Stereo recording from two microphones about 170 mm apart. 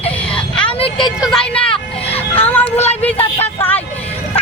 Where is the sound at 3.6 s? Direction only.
10° left (ahead or behind).